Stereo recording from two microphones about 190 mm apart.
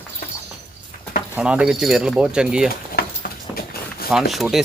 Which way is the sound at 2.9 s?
50° left (ahead or behind).